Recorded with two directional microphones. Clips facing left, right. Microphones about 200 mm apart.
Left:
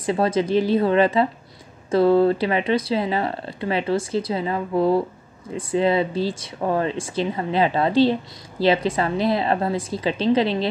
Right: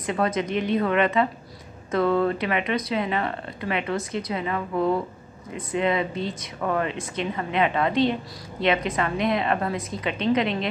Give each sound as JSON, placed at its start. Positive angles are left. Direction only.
{"t": 0.0, "sound": "speech", "side_deg": 30}